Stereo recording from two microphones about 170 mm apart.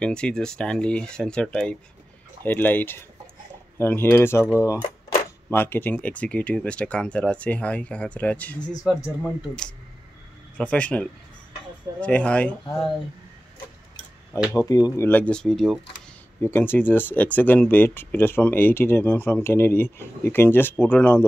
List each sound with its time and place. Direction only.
0.0 s speech: 5° left (ahead or behind)
14.5 s speech: 20° left (ahead or behind); by 15.8 s centre (ahead or behind)
16.3 s speech: 15° left (ahead or behind)